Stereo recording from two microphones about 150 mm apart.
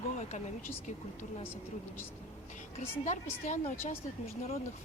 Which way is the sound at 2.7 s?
50° left (ahead or behind).